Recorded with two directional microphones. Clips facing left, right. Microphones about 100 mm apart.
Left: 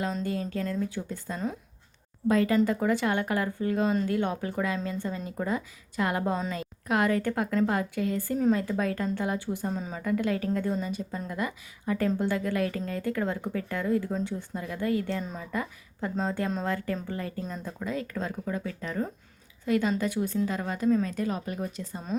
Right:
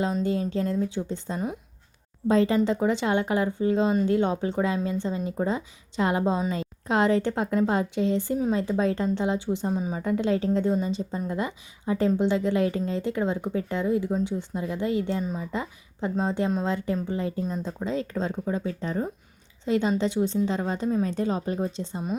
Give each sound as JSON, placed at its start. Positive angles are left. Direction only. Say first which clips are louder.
{"t": 0.0, "sound": "a woman's voice", "louder": "right 5 dB", "side_deg": -20}